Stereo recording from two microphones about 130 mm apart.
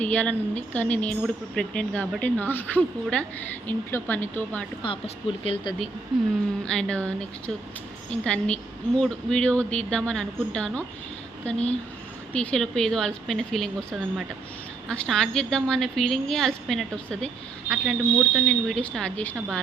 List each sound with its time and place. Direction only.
0.0 s speech: 10° left (ahead or behind)
4.8 s speech: 45° left (ahead or behind)
6.1 s a woman's voice: centre (ahead or behind)